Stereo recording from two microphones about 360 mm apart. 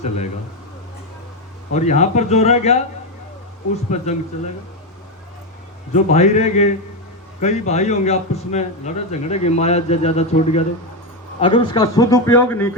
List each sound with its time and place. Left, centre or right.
1.7 s speech: centre
3.9 s speech: centre
5.9 s a man's voice: centre